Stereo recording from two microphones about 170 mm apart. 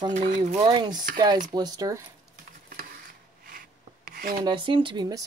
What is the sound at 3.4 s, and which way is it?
Rub, 55° right (ahead or behind).